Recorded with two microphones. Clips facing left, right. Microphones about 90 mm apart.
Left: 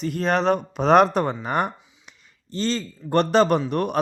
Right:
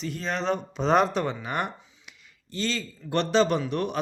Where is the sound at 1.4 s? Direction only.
45° left (ahead or behind).